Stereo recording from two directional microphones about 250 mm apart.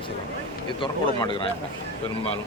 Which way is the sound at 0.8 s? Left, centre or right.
Centre.